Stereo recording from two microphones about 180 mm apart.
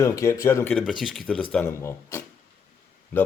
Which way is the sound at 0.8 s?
Centre (ahead or behind).